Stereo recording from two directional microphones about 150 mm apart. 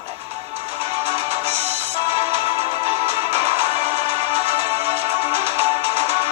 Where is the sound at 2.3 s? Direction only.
45° right (ahead or behind).